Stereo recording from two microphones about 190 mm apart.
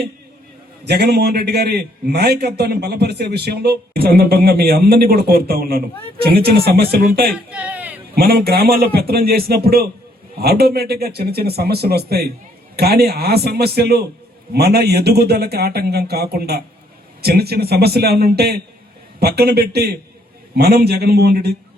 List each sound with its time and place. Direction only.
0.9 s a man's voice: 60° right (ahead or behind)
7.3 s a sound: 5° right (ahead or behind)
8.1 s a man's voice: 55° right (ahead or behind)